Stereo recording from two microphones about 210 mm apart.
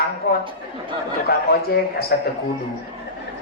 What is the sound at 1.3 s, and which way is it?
Speech, 50° left (ahead or behind).